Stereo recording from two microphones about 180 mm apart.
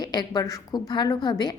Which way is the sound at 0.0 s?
20° left (ahead or behind).